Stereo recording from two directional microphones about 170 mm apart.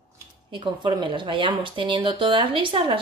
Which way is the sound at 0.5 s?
30° right (ahead or behind).